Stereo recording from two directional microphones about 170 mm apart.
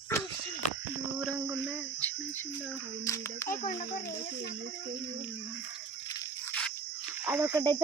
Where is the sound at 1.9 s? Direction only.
10° left (ahead or behind).